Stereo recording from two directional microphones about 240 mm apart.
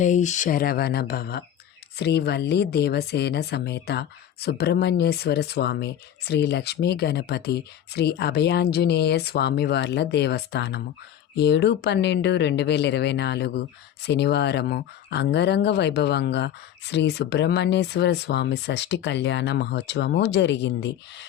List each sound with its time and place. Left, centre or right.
0.0 s speech: left